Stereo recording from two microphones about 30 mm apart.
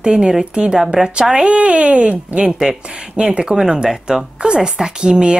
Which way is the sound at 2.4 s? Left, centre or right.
Centre.